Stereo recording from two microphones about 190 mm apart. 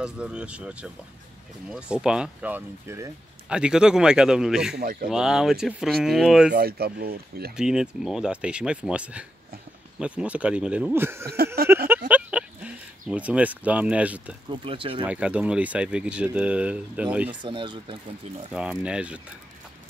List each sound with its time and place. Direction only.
0.0 s speech: 5° right (ahead or behind)
4.7 s speech: 50° right (ahead or behind)
5.1 s speech: 5° right (ahead or behind)
6.5 s speech: 55° right (ahead or behind)
7.5 s speech: 5° right (ahead or behind)
11.2 s a sound: 55° right (ahead or behind)
12.1 s a sound: 5° right (ahead or behind)
14.5 s speech: 30° right (ahead or behind)
15.0 s speech: 5° right (ahead or behind)
17.4 s speech: 25° right (ahead or behind)
18.5 s speech: 5° right (ahead or behind)